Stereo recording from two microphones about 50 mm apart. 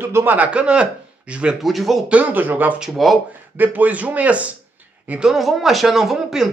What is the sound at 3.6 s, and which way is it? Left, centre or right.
Speech, right.